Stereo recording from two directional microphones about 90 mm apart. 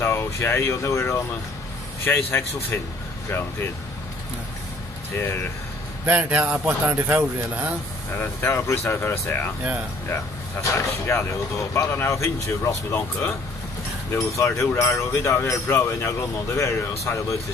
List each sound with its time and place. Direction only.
0.0 s speech: 30° left (ahead or behind)
6.0 s speech: 15° right (ahead or behind)
8.1 s speech: 25° left (ahead or behind)